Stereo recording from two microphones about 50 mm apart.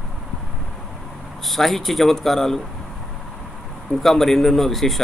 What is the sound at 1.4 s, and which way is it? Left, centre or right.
A man's voice, centre.